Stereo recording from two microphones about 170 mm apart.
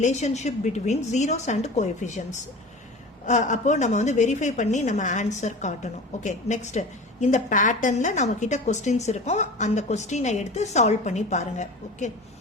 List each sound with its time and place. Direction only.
0.0 s a woman's voice: 40° left (ahead or behind)